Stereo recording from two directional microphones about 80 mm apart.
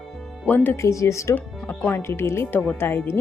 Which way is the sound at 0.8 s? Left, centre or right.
Left.